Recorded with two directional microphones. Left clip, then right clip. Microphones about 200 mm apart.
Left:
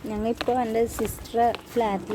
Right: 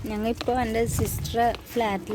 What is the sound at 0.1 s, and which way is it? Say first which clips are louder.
Speech: left 1 dB; 10° right (ahead or behind).